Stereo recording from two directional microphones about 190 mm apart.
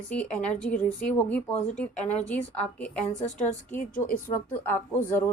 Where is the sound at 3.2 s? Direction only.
40° left (ahead or behind).